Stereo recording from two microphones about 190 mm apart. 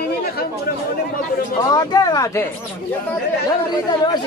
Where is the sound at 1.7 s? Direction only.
20° left (ahead or behind).